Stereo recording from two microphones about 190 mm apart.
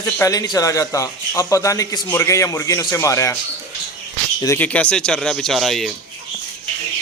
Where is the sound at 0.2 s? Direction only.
20° left (ahead or behind).